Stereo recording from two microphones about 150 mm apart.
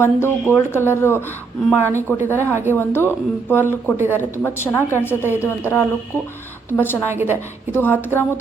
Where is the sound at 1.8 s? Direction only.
20° right (ahead or behind).